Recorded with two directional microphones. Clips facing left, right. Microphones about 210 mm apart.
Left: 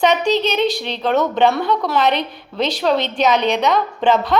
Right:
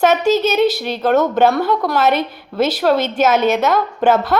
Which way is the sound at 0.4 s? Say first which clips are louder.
Right 3 dB; 5° right (ahead or behind).